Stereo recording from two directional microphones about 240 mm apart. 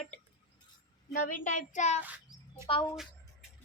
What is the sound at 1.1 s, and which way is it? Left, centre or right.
Speech, left.